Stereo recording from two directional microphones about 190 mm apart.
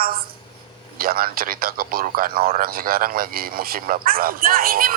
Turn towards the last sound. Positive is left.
turn(degrees=-50)  # may be behind; listen again after turning